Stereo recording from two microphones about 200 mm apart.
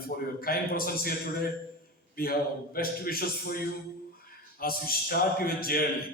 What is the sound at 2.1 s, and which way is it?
A man's voice, 50° left (ahead or behind).